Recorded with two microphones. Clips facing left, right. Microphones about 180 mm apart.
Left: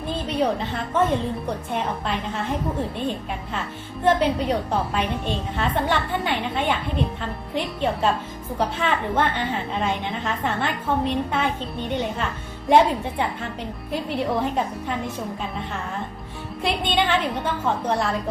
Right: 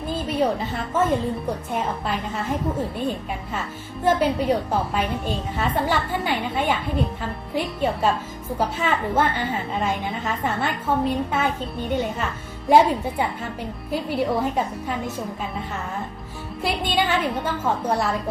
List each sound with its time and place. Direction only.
0.1 s a woman's voice: 5° right (ahead or behind)
4.0 s a woman's voice: 5° right (ahead or behind)
16.6 s a woman's voice: 5° right (ahead or behind)